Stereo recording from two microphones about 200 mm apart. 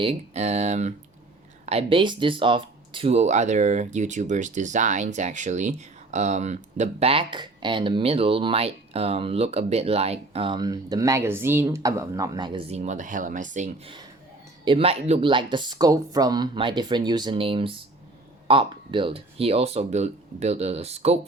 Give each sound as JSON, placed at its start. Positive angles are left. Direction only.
{"t": 0.0, "sound": "speech", "side_deg": -30}
{"t": 14.6, "sound": "speech", "side_deg": -25}